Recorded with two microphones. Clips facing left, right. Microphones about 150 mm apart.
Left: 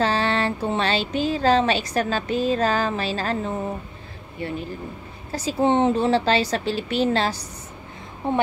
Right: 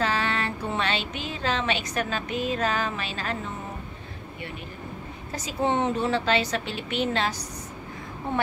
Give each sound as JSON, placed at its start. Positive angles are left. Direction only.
{"t": 0.0, "sound": "speech", "side_deg": 30}
{"t": 5.3, "sound": "speech", "side_deg": 30}
{"t": 8.2, "sound": "a woman's voice", "side_deg": 20}